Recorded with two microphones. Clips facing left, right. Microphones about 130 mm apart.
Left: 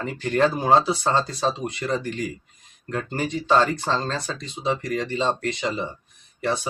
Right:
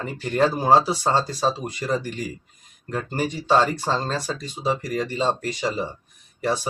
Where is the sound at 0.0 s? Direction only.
5° right (ahead or behind).